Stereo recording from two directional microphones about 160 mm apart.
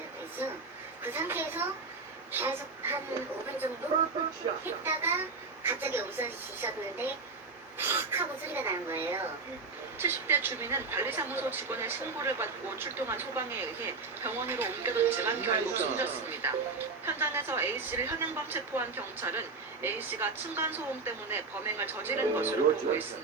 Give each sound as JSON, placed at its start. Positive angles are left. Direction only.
{"t": 1.0, "sound": "a woman's voice", "side_deg": -10}
{"t": 4.6, "sound": "speech", "side_deg": -15}